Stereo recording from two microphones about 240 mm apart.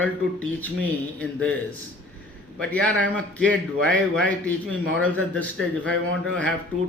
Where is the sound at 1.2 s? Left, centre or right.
Centre.